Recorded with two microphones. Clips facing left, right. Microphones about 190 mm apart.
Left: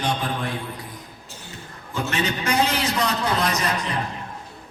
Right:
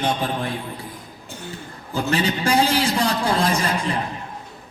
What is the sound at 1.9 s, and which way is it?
A man's voice, 35° right (ahead or behind).